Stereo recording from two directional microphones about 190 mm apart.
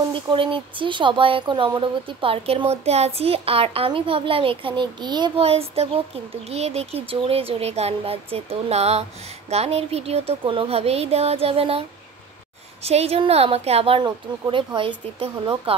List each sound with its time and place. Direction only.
0.1 s speech: 25° right (ahead or behind)
12.8 s speech: 30° right (ahead or behind)